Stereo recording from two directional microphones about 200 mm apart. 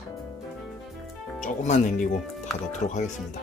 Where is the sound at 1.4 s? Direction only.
35° left (ahead or behind).